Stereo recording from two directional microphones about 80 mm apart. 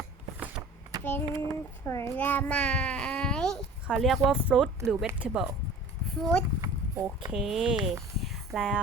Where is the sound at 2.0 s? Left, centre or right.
Left; by 4.4 s centre.